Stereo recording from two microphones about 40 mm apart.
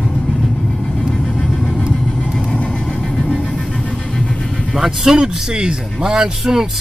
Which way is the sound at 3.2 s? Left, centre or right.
Centre.